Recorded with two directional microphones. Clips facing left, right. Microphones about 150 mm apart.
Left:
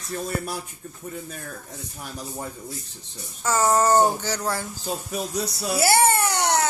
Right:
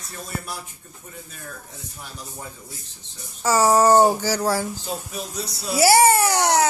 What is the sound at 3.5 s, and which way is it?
Speech, 10° right (ahead or behind).